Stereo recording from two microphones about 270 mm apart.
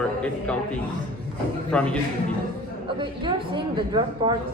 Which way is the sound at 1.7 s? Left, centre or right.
Centre.